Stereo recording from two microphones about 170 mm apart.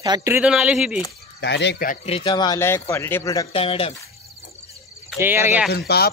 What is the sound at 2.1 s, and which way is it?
Speech, 30° left (ahead or behind).